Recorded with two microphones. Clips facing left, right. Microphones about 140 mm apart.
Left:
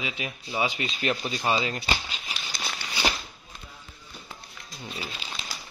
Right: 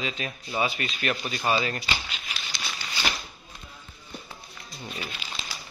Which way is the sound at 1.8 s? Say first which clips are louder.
Left 2 dB; 35° left (ahead or behind).